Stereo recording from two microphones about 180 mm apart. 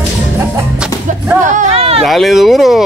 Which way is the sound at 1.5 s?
35° right (ahead or behind).